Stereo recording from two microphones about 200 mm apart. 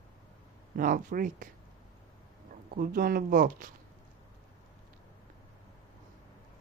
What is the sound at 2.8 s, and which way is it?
Speech, 45° right (ahead or behind).